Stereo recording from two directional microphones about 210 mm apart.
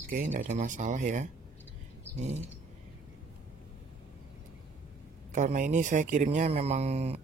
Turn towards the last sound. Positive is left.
turn(degrees=-30)  # may be behind; listen again after turning